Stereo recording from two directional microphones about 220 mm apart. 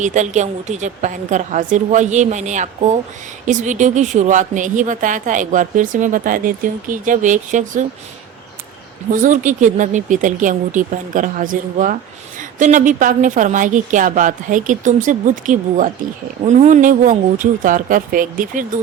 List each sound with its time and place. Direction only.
0.0 s speech: 35° right (ahead or behind)
9.1 s speech: 35° right (ahead or behind)